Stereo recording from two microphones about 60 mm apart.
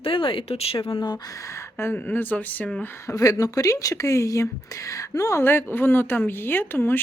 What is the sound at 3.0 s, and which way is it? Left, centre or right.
Speech, left.